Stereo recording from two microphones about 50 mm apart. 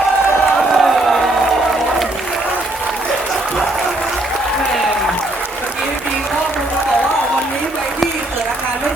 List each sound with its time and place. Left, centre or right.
0.7 s music: centre